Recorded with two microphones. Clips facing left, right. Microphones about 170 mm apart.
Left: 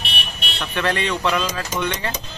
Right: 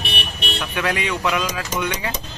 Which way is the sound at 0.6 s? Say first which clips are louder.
Left 2 dB; 10° right (ahead or behind).